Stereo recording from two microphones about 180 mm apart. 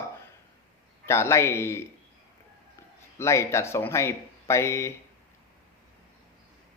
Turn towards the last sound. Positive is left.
turn(degrees=15)  # may be behind; listen again after turning